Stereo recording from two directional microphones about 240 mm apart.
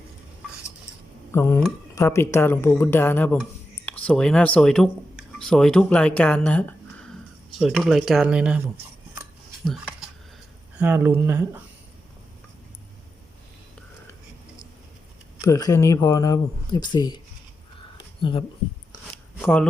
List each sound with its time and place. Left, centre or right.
1.3 s speech: centre
9.6 s a sound: centre
10.8 s speech: centre
15.4 s speech: centre
17.9 s a sound: left
19.4 s speech: centre